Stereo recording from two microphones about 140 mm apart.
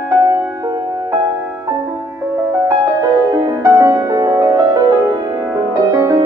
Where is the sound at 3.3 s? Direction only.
25° right (ahead or behind).